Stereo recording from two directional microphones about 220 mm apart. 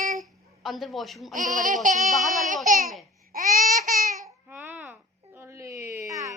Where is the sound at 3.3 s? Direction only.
40° right (ahead or behind).